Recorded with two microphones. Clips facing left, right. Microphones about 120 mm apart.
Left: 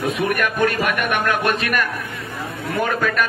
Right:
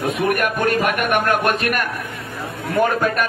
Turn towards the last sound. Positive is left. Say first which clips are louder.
# right 3 dB
turn(degrees=-45)  # may be behind; listen again after turning